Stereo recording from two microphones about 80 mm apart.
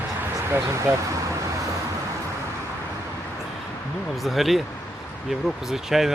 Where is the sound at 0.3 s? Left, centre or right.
Right.